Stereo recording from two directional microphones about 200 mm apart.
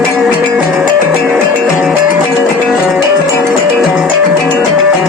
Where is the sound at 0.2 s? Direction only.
5° right (ahead or behind).